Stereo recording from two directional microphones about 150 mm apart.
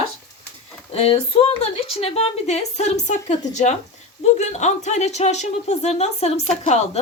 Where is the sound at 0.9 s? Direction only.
40° left (ahead or behind).